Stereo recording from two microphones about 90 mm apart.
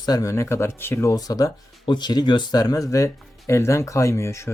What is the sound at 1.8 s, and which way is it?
Speech, 55° left (ahead or behind).